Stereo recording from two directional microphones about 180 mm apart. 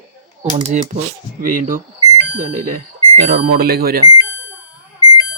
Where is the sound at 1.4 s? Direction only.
50° right (ahead or behind).